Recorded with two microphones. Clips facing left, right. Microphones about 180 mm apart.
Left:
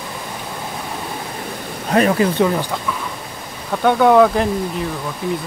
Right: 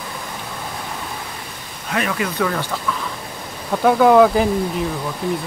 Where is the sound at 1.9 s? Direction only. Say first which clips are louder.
Left 7 dB; 35° left (ahead or behind).